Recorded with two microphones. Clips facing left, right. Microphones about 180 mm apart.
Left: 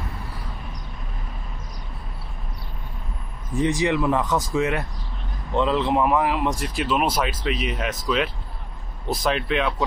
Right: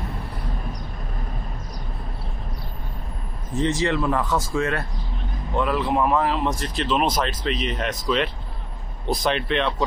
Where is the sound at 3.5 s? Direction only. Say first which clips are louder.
Left 1 dB; 15° left (ahead or behind).